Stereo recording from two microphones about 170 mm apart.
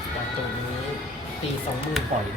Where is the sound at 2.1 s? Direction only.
45° right (ahead or behind).